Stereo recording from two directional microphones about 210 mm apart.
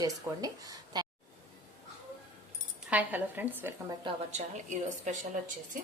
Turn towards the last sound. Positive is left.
turn(degrees=-35)  # may be behind; listen again after turning